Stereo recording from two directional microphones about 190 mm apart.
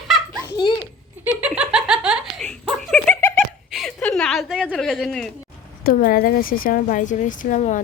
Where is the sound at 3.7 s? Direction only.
Centre (ahead or behind).